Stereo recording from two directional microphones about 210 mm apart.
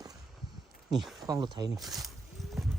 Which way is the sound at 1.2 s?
20° right (ahead or behind).